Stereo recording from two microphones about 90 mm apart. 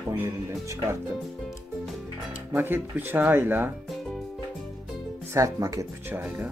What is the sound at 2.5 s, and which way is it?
Speech, 25° right (ahead or behind).